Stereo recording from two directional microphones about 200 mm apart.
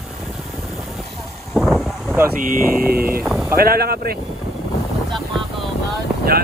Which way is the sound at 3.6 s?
50° right (ahead or behind).